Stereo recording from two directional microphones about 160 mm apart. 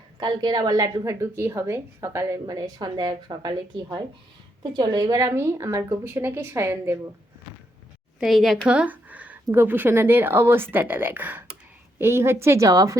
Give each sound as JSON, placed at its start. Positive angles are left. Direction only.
{"t": 0.2, "sound": "a woman's voice", "side_deg": -25}
{"t": 8.2, "sound": "a woman's voice", "side_deg": 0}